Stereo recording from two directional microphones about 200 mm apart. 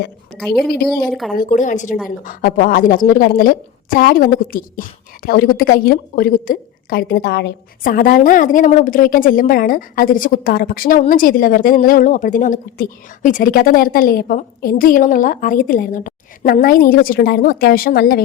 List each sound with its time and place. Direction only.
0.3 s a woman's voice: centre (ahead or behind)
1.4 s a woman's voice: 40° left (ahead or behind)